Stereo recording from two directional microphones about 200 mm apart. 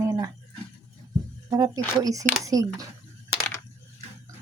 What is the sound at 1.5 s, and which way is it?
Speech, 15° right (ahead or behind).